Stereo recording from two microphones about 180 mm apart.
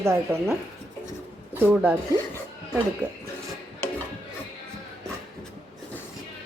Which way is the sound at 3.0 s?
10° left (ahead or behind).